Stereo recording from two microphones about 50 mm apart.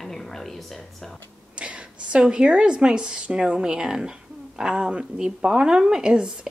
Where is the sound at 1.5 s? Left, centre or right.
Right.